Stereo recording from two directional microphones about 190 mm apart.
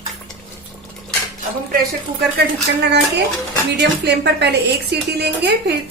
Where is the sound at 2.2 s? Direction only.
60° right (ahead or behind).